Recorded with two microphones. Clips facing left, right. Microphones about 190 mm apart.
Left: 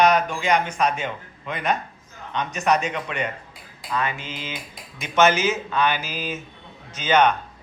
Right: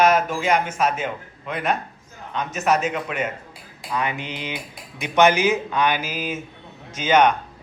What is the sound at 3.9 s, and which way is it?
Speech, 15° right (ahead or behind).